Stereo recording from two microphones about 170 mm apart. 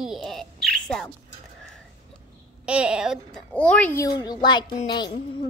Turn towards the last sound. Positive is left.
turn(degrees=25)  # may be behind; listen again after turning